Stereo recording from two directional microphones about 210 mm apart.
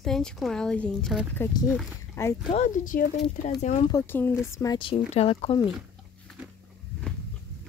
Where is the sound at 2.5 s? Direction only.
35° left (ahead or behind).